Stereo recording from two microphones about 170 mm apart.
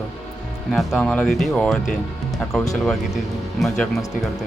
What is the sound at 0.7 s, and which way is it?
Speech, 5° left (ahead or behind).